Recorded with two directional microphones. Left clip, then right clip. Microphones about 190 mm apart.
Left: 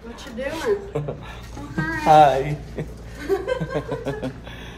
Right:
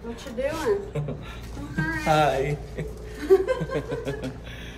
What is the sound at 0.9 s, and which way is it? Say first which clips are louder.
Speech: left 5 dB; 5° left (ahead or behind).